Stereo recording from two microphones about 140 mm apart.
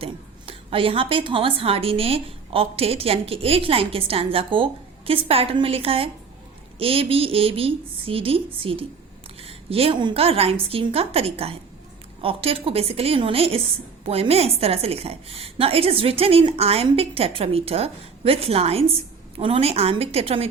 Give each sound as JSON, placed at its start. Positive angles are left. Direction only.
{"t": 0.0, "sound": "a woman's voice", "side_deg": -40}